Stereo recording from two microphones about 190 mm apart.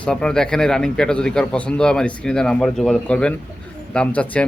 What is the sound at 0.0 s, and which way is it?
Speech, 5° left (ahead or behind).